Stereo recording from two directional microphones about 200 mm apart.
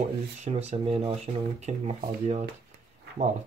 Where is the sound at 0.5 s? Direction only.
30° right (ahead or behind).